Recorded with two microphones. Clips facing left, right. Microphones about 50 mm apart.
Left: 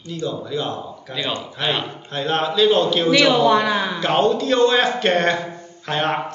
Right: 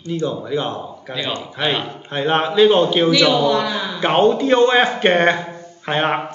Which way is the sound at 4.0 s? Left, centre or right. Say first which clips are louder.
Right 5 dB; right.